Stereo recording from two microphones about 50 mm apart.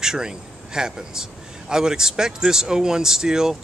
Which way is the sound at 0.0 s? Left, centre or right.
Centre.